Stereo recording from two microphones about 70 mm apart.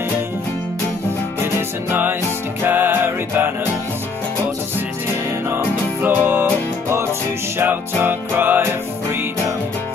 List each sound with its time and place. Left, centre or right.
1.9 s music: right
5.5 s music: right
7.5 s music: right